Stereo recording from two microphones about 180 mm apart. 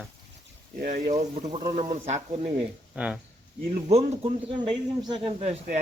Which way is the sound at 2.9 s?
5° right (ahead or behind).